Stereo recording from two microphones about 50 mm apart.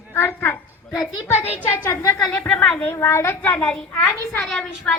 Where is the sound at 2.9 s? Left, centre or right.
Left.